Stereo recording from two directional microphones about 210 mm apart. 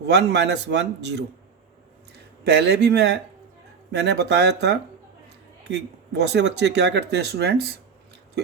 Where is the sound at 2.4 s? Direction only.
55° right (ahead or behind).